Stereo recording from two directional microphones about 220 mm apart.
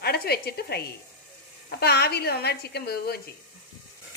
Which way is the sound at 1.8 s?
45° left (ahead or behind).